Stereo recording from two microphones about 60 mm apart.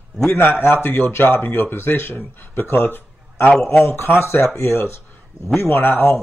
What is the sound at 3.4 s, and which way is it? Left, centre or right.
Speech, centre.